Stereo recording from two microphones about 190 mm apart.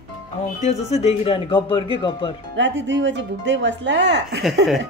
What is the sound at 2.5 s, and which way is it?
Speech, 75° right (ahead or behind).